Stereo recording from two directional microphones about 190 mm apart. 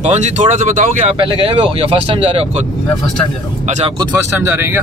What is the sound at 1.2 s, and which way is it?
Speech, 30° right (ahead or behind).